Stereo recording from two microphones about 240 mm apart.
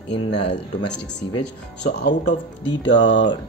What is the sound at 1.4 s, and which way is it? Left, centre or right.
Speech, left.